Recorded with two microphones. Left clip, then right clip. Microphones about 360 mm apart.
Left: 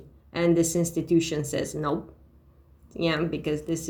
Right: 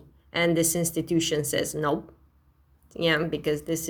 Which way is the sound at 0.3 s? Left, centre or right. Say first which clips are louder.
Even; right.